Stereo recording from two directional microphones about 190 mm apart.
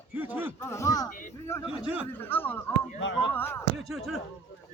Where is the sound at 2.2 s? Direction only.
10° left (ahead or behind).